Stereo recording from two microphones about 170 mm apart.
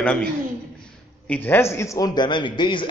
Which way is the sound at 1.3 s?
10° left (ahead or behind).